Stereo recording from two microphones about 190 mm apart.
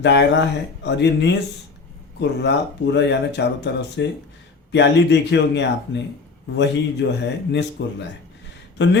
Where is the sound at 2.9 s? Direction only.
65° left (ahead or behind).